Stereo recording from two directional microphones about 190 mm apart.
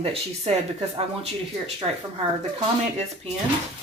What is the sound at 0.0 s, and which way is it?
Speech, 30° right (ahead or behind).